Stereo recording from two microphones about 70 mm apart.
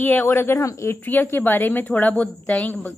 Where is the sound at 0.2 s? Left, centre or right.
Left.